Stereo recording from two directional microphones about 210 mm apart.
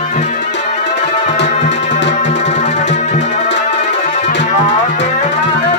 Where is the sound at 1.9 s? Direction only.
55° left (ahead or behind).